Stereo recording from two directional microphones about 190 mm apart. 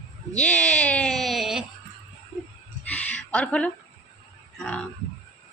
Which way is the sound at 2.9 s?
5° left (ahead or behind).